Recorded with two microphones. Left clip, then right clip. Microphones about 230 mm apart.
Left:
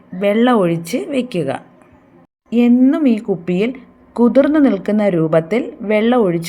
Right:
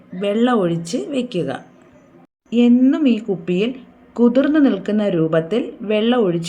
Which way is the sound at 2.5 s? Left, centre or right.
Left.